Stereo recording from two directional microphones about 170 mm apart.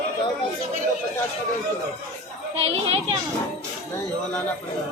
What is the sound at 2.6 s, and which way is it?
Children playing, 35° right (ahead or behind).